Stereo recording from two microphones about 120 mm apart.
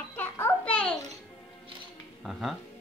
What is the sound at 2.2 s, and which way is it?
Speech, centre (ahead or behind).